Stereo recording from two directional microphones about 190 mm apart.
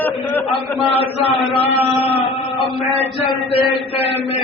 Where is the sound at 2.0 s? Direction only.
30° left (ahead or behind).